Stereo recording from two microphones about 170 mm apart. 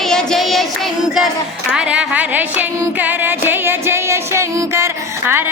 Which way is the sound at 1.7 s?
5° right (ahead or behind).